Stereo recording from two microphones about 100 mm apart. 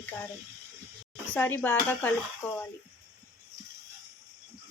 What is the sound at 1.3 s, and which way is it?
Speech, 15° left (ahead or behind).